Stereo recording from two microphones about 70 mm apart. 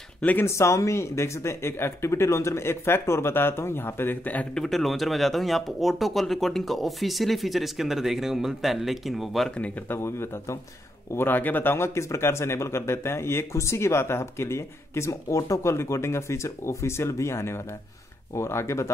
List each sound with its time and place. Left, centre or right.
0.2 s speech: left
0.6 s speech: left
4.6 s speech: centre
9.8 s speech: left
11.1 s speech: left